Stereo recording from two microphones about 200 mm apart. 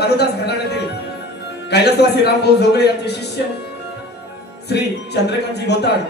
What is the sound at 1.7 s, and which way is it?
A man's voice, 55° left (ahead or behind).